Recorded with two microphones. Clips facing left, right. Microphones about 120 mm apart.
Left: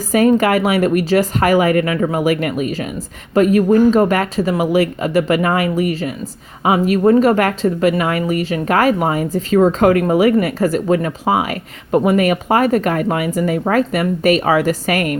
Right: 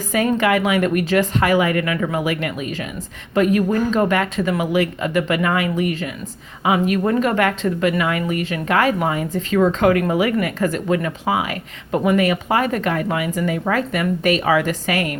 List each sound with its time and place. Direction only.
0.1 s speech: 40° left (ahead or behind)